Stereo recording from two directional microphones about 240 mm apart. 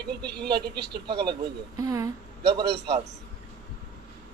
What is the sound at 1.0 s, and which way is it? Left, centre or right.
Speech, centre.